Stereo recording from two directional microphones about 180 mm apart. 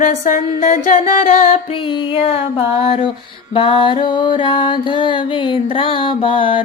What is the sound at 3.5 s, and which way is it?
Music, 30° left (ahead or behind).